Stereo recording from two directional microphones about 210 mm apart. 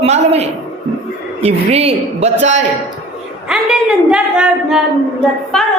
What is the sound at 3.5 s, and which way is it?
Speech, 5° right (ahead or behind).